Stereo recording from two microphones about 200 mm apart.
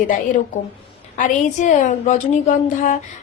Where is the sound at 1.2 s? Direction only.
35° left (ahead or behind).